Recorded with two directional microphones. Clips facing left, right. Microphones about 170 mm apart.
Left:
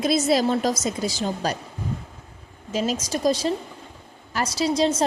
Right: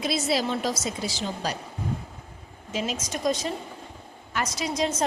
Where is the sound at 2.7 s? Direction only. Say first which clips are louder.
Left 5 dB; 35° left (ahead or behind).